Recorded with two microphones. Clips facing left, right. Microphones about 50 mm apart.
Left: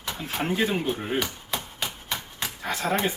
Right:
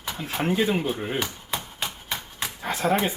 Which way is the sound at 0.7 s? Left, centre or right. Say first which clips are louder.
Right 1 dB; centre.